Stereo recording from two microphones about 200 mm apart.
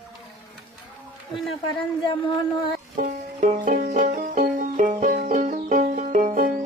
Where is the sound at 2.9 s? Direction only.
40° right (ahead or behind).